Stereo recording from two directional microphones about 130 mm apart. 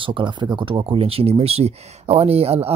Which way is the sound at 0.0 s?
40° right (ahead or behind).